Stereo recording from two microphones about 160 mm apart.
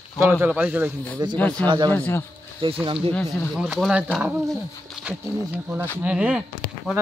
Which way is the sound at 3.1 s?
Centre (ahead or behind).